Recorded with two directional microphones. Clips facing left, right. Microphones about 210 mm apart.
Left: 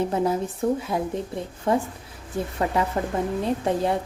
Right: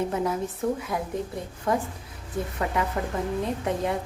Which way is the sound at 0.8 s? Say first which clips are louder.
Left 3 dB; 30° left (ahead or behind).